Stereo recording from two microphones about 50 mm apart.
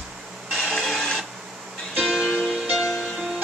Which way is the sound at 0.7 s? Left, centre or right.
Centre.